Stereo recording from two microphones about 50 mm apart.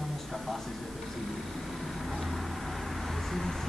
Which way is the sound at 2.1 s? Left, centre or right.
Centre.